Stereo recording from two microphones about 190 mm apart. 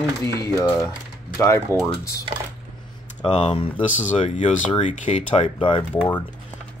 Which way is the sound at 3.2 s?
25° left (ahead or behind).